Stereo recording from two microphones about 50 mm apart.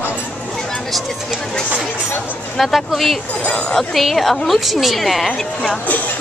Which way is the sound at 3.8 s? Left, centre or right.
Centre.